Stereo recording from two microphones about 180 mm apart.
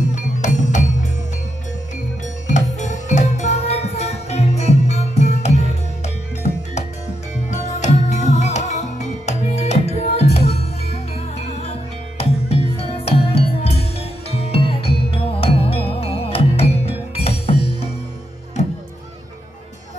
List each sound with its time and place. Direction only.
0.0 s music: 40° left (ahead or behind)
2.4 s music: 40° left (ahead or behind)